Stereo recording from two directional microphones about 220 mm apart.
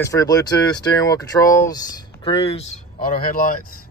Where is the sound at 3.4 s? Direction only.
40° left (ahead or behind).